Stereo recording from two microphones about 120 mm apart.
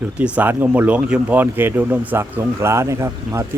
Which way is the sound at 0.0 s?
10° right (ahead or behind).